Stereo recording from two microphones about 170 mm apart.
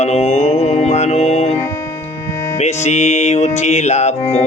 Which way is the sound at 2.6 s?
40° left (ahead or behind).